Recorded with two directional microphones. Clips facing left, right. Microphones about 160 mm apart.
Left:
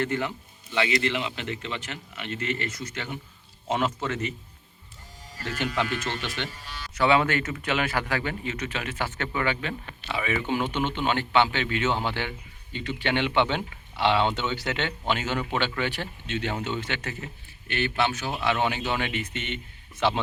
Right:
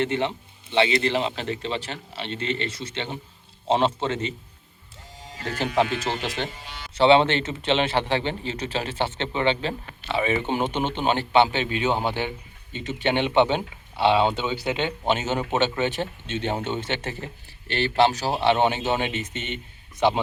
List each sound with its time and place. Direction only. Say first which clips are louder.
0.0 s speech: right 3 dB; 25° right (ahead or behind)
6.5 s speech: right 1 dB; 20° right (ahead or behind)